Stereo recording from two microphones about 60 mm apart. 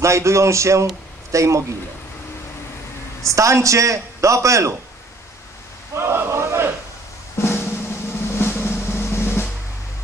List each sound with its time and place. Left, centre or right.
0.0 s a man's voice: right
3.3 s a man's voice: right
5.9 s a sound: right
7.5 s drum roll: left